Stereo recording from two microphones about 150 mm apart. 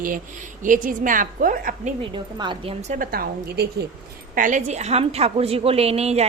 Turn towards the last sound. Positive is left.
turn(degrees=-45)  # may be behind; listen again after turning